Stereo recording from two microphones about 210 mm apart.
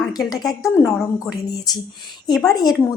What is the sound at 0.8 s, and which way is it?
Speech, 15° left (ahead or behind).